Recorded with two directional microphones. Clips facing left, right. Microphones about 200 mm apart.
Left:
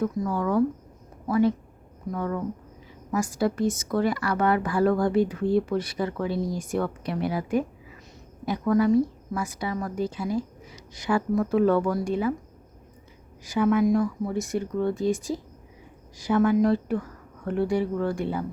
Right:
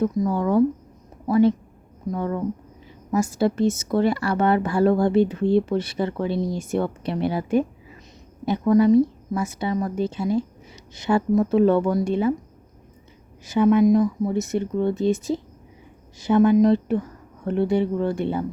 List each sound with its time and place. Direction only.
0.0 s speech: 25° right (ahead or behind)
13.4 s speech: 25° right (ahead or behind)